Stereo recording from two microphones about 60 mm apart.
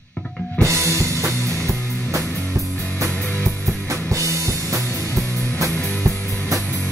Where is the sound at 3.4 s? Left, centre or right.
Right.